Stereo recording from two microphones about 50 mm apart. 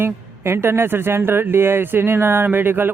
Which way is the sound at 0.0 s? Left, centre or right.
Right.